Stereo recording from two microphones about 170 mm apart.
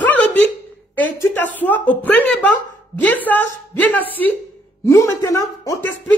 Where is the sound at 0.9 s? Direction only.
10° left (ahead or behind).